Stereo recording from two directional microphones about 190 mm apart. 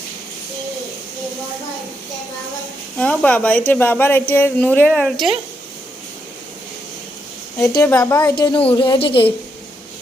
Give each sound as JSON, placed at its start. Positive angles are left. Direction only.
{"t": 3.0, "sound": "speech", "side_deg": 5}
{"t": 7.6, "sound": "speech", "side_deg": 15}
{"t": 8.4, "sound": "speech", "side_deg": 25}